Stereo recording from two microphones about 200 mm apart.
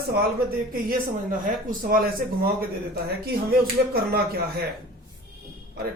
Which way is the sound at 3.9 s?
50° right (ahead or behind).